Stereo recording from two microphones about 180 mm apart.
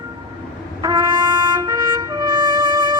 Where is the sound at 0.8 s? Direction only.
20° right (ahead or behind).